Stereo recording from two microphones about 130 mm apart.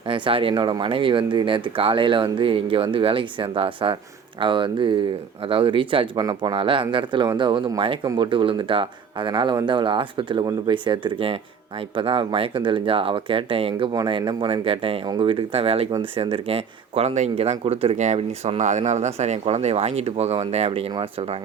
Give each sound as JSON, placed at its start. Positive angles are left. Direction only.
{"t": 0.1, "sound": "speech", "side_deg": -45}